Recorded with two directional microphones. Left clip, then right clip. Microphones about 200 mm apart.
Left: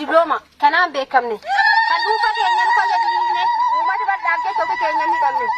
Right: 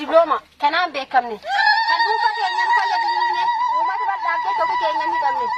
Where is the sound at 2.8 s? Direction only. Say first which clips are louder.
Left 2 dB; 25° left (ahead or behind).